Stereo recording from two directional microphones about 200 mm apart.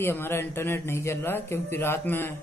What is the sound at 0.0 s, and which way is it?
Speech, 10° left (ahead or behind).